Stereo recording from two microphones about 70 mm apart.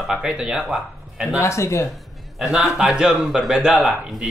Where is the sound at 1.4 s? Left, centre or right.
Left.